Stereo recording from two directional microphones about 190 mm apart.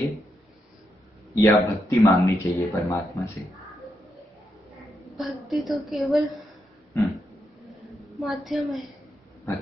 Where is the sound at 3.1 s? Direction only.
Centre (ahead or behind).